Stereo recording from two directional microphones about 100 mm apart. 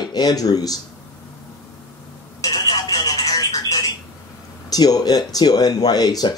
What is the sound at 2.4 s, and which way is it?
Telephone, 40° left (ahead or behind).